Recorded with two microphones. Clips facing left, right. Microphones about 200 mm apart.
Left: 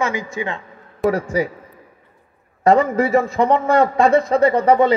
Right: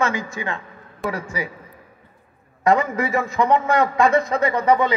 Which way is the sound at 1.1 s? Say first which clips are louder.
Left 8 dB; 40° left (ahead or behind).